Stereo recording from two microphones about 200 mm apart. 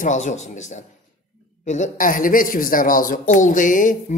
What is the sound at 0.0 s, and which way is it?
A woman's voice, 35° left (ahead or behind).